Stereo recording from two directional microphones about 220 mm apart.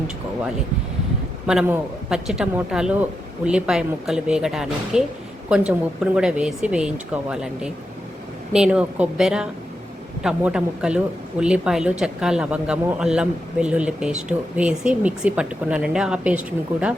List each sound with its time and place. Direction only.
1.5 s speech: 5° right (ahead or behind)